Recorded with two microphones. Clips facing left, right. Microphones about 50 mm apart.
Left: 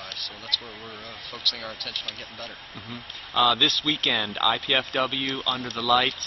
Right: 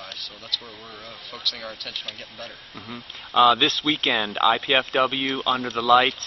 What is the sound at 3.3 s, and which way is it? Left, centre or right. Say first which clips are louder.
Speech: right 4 dB; right.